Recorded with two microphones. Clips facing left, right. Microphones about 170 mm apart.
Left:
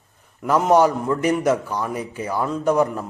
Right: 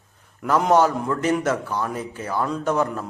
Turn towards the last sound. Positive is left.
turn(degrees=10)  # may be behind; listen again after turning